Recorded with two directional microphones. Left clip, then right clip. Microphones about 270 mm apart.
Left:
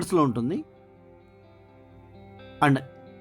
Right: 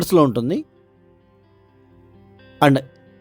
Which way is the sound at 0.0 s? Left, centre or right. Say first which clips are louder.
Right 8 dB; right.